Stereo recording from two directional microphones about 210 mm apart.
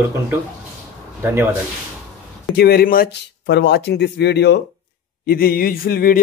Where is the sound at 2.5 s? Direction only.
45° left (ahead or behind).